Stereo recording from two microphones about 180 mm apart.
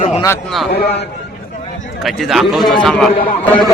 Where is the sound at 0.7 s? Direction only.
60° left (ahead or behind).